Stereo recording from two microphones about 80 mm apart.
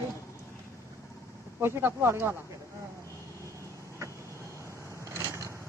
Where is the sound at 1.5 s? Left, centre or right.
Right.